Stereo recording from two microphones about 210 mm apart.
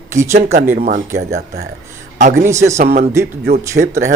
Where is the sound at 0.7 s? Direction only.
45° right (ahead or behind).